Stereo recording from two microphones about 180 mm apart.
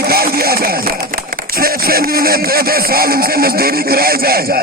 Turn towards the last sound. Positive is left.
turn(degrees=-55)  # may be behind; listen again after turning